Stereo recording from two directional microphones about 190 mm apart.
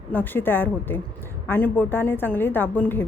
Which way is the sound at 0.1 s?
10° left (ahead or behind).